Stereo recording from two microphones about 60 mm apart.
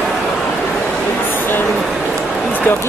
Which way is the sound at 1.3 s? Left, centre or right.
Left.